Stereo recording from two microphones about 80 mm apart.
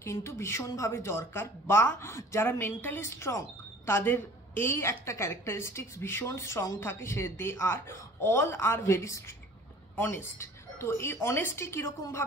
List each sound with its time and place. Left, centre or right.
0.0 s speech: left